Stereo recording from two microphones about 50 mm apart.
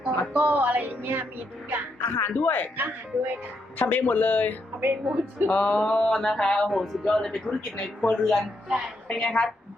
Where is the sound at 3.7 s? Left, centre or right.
Left.